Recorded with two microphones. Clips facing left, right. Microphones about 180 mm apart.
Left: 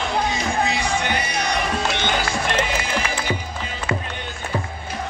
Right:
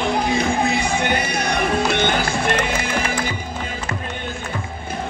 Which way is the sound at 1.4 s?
55° right (ahead or behind).